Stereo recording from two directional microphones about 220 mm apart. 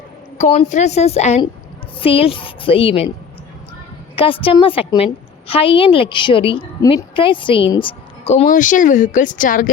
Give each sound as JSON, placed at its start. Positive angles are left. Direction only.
{"t": 0.3, "sound": "a woman's voice", "side_deg": 30}
{"t": 4.1, "sound": "a woman's voice", "side_deg": 25}